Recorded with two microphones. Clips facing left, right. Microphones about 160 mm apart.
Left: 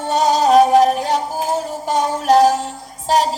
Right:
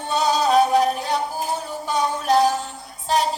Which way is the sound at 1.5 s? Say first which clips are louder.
Left 5 dB; 45° left (ahead or behind).